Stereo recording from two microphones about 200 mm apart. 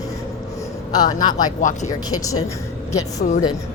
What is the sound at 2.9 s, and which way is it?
Speech, 20° left (ahead or behind).